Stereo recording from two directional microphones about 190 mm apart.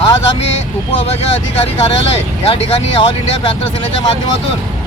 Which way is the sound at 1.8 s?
30° left (ahead or behind).